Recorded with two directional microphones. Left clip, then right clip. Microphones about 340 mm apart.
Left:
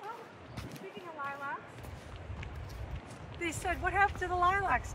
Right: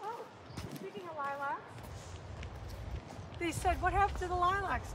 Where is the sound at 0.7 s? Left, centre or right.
Right.